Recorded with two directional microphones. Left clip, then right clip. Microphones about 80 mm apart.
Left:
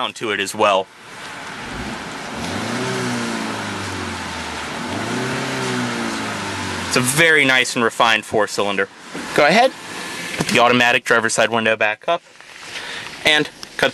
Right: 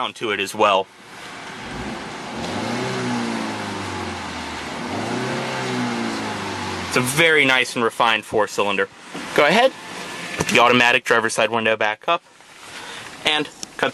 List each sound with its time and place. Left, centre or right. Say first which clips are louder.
0.0 s speech: left 2 dB; centre
2.4 s vehicle: left 1 dB; left
6.9 s speech: left 2 dB; centre
13.2 s a sound: left 5 dB; left